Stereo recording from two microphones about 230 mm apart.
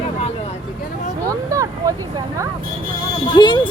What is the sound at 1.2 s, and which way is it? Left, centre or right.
Vehicle, centre.